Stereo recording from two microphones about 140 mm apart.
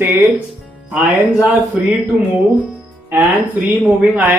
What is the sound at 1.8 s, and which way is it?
Speech, 5° right (ahead or behind).